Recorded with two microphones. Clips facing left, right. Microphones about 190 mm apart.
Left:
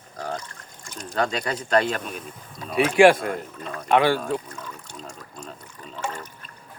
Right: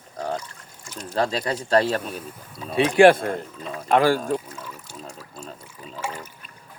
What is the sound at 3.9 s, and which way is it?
Speech, 40° right (ahead or behind).